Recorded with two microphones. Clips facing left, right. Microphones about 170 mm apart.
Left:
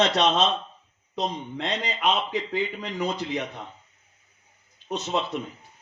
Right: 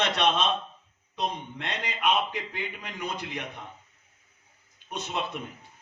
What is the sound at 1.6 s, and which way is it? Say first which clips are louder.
A man's voice: left 3 dB; 60° right (ahead or behind).